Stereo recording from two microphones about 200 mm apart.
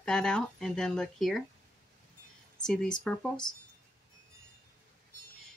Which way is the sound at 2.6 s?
5° left (ahead or behind).